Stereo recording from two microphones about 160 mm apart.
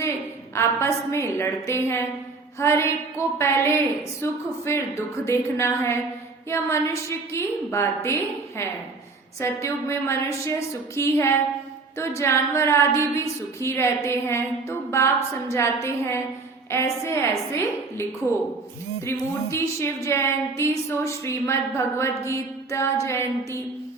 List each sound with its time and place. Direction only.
0.5 s a woman's voice: 15° left (ahead or behind)